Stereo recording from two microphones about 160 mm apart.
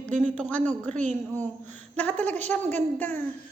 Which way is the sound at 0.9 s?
45° right (ahead or behind).